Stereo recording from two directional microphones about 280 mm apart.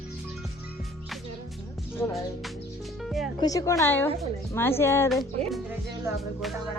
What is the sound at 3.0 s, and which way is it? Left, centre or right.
Music, centre.